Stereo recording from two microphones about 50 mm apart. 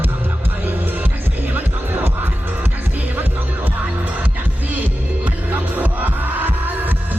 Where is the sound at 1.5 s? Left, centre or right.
Right.